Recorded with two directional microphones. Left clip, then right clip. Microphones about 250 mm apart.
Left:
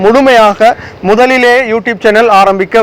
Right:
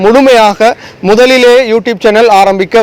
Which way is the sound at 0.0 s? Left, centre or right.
Right.